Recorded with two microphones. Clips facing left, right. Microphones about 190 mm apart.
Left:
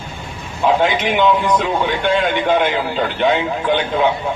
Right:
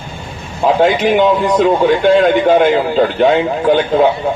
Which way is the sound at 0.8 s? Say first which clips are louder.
Right 5 dB; 45° right (ahead or behind).